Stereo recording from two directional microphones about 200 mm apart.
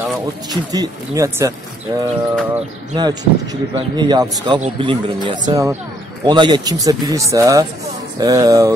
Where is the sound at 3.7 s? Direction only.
20° right (ahead or behind).